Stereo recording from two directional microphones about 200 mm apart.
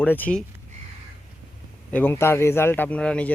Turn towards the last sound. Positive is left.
turn(degrees=5)  # may be behind; listen again after turning